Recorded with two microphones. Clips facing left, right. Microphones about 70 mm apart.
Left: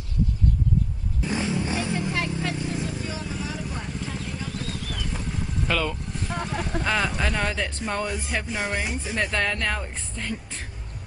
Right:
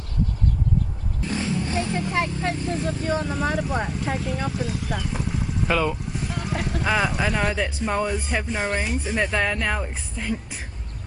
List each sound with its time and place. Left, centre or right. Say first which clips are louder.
1.2 s roaring cats: even; centre
2.0 s speech: right 3 dB; right
2.8 s speech: right 6 dB; right
4.5 s clip-clop: right 5 dB; centre
5.0 s vehicle: right 3 dB; centre
6.6 s speech: right 3 dB; centre